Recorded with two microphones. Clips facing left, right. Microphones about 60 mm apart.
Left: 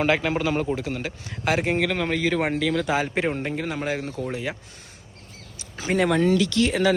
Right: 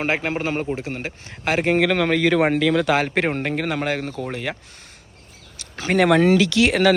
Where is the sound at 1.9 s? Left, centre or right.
Right.